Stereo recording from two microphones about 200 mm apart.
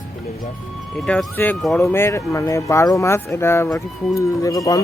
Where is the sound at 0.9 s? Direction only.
5° left (ahead or behind).